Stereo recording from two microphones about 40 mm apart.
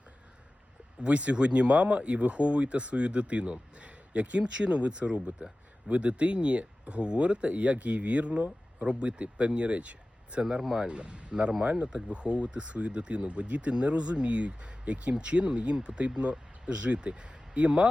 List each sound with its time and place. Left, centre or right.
1.0 s speech: right
5.4 s speech: right
10.4 s speech: centre
10.8 s speech: right
11.9 s speech: centre
12.1 s speech: right